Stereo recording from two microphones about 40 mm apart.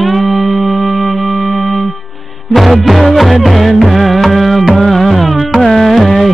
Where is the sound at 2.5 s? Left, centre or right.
Centre.